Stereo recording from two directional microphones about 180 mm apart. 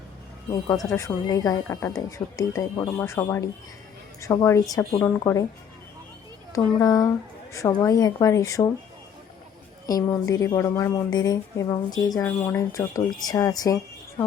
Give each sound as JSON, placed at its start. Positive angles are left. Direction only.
{"t": 0.5, "sound": "speech", "side_deg": 15}
{"t": 6.5, "sound": "a woman's voice", "side_deg": 20}
{"t": 9.8, "sound": "a woman's voice", "side_deg": 20}